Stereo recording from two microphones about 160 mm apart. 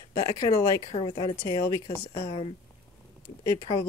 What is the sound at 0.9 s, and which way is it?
Speech, 35° left (ahead or behind).